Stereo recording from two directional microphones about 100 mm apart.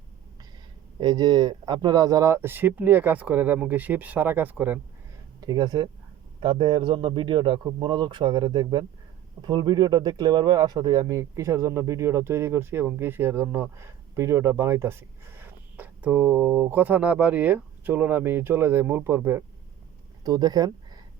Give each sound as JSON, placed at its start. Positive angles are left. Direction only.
{"t": 0.9, "sound": "speech", "side_deg": -45}
{"t": 5.4, "sound": "speech", "side_deg": -40}
{"t": 6.4, "sound": "speech", "side_deg": -55}
{"t": 20.2, "sound": "speech", "side_deg": -40}